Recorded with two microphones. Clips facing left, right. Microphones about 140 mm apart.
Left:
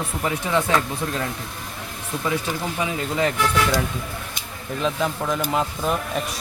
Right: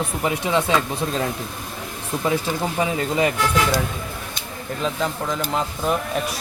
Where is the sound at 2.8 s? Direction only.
30° right (ahead or behind).